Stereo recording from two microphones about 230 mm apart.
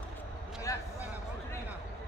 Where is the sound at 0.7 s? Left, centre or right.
Centre.